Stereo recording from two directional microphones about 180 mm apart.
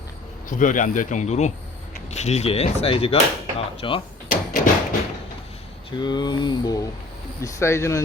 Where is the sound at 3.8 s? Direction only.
30° left (ahead or behind).